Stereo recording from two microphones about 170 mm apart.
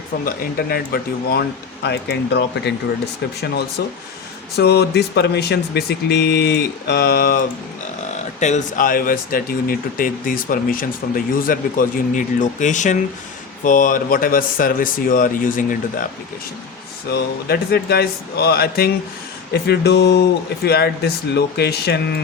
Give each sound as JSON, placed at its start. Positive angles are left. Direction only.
{"t": 0.3, "sound": "speech", "side_deg": 65}
{"t": 1.3, "sound": "speech", "side_deg": 75}
{"t": 3.8, "sound": "speech", "side_deg": 70}
{"t": 8.4, "sound": "speech", "side_deg": 45}
{"t": 17.1, "sound": "speech", "side_deg": 70}
{"t": 19.6, "sound": "speech", "side_deg": 80}
{"t": 20.7, "sound": "speech", "side_deg": 70}